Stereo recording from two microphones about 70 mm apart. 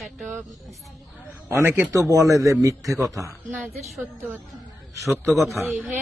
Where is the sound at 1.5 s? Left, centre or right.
Right.